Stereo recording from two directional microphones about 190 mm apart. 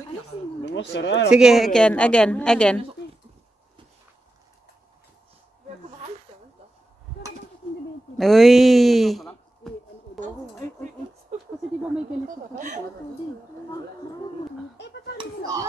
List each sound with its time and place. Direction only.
0.7 s speech: 65° left (ahead or behind)
1.3 s a woman's voice: centre (ahead or behind)
8.2 s a woman's voice: centre (ahead or behind)
11.3 s a sound: 35° right (ahead or behind)
12.5 s speech: 40° right (ahead or behind)
15.1 s a sound: 20° right (ahead or behind)